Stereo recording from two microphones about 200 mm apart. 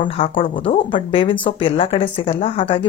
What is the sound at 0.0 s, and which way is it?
Speech, 25° left (ahead or behind).